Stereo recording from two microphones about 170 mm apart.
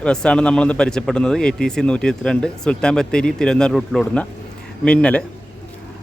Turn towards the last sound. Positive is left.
turn(degrees=5)  # may be behind; listen again after turning